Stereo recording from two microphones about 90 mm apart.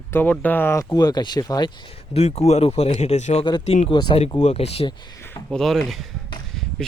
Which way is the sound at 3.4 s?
55° left (ahead or behind).